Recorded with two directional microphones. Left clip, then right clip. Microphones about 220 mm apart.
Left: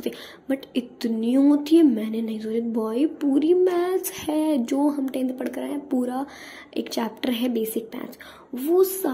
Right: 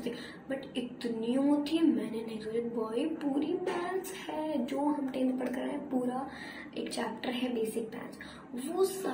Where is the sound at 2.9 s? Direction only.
45° left (ahead or behind).